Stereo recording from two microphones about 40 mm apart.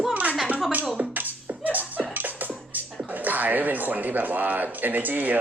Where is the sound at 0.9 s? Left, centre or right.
Right.